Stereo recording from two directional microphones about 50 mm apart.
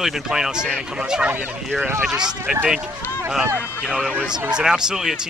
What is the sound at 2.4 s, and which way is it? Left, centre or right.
Speech, right.